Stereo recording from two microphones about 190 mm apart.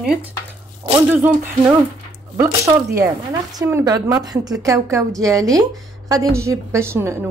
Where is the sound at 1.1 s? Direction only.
10° right (ahead or behind).